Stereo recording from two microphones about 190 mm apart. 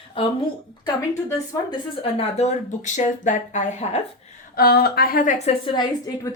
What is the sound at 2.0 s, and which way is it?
Speech, 35° left (ahead or behind).